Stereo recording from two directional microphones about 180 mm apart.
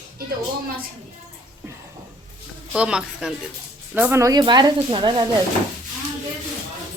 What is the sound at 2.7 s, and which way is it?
Speech, 5° right (ahead or behind).